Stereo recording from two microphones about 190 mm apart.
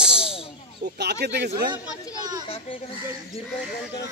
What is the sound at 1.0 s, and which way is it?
Speech, 60° right (ahead or behind).